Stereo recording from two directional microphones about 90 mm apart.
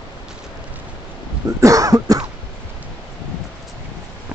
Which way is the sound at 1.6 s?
40° right (ahead or behind).